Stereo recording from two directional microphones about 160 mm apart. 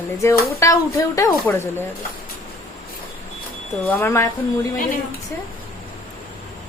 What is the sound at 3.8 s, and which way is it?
Speech, 10° left (ahead or behind).